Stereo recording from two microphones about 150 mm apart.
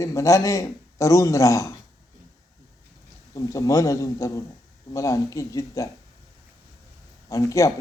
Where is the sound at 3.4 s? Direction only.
20° left (ahead or behind).